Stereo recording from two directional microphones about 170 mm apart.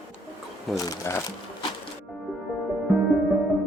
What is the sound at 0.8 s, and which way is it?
Speech, 20° left (ahead or behind).